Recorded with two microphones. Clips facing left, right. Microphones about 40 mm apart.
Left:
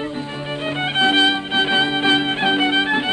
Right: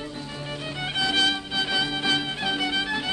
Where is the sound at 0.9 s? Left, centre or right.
Left.